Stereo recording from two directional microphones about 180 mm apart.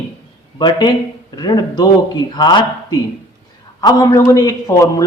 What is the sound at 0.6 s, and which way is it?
Speech, 25° left (ahead or behind).